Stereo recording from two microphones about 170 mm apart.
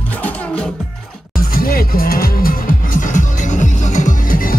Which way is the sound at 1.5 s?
60° left (ahead or behind).